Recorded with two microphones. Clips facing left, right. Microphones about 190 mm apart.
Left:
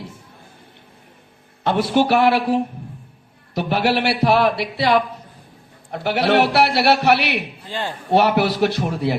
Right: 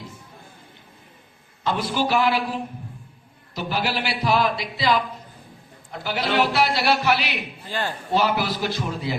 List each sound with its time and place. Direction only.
1.6 s a man's voice: 65° left (ahead or behind)
7.7 s speech: 20° left (ahead or behind)
8.1 s a man's voice: 65° left (ahead or behind)